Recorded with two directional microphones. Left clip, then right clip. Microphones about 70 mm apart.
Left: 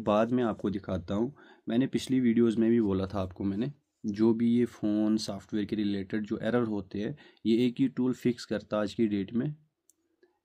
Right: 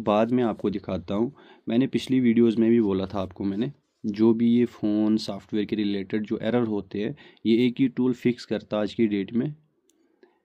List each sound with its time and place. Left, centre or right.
0.0 s speech: left